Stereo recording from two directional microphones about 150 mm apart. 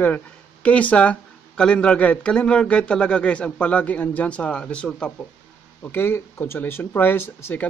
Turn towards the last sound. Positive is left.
turn(degrees=15)  # may be behind; listen again after turning